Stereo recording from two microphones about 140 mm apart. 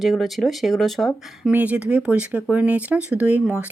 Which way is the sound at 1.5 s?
10° right (ahead or behind).